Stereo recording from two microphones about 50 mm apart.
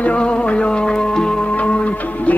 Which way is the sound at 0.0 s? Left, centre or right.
Left.